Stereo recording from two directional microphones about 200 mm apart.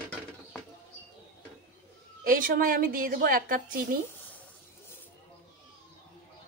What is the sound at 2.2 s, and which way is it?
A woman's voice, 45° right (ahead or behind).